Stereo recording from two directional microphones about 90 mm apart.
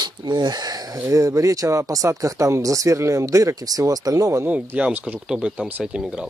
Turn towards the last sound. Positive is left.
turn(degrees=-10)  # may be behind; listen again after turning